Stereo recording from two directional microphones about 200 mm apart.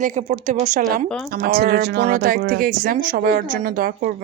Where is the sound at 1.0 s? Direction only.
5° left (ahead or behind).